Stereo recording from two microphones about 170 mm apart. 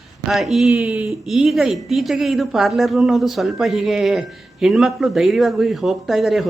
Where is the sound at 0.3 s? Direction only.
Centre (ahead or behind).